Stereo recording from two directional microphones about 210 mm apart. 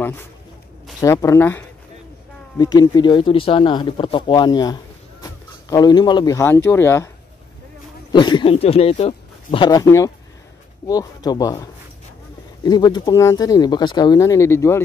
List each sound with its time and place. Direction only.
0.0 s a man's voice: 10° left (ahead or behind)
8.1 s speech: 20° left (ahead or behind)